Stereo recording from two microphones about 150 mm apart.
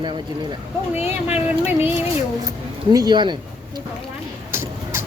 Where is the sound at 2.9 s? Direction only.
25° right (ahead or behind).